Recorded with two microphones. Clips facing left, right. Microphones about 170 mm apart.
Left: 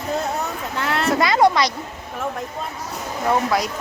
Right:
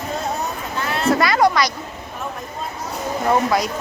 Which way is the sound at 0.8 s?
80° left.